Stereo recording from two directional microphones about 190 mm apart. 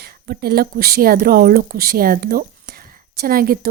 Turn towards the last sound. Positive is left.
turn(degrees=-50)  # may be behind; listen again after turning